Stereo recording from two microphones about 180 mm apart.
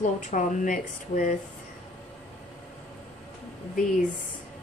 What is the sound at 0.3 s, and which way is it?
Speech, 45° left (ahead or behind).